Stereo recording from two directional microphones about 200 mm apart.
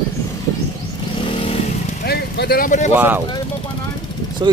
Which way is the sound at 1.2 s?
30° left (ahead or behind).